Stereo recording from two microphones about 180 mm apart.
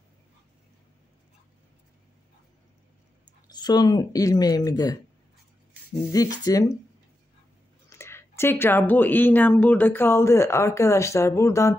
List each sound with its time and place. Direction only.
3.4 s speech: 20° left (ahead or behind)
6.1 s speech: 20° left (ahead or behind)
8.0 s speech: 15° left (ahead or behind)